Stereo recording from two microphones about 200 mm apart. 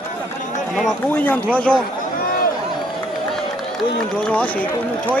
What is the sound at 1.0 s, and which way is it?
Speech, 10° left (ahead or behind).